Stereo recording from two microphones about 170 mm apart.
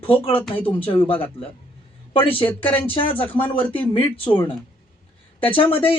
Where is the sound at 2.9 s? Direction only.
30° left (ahead or behind).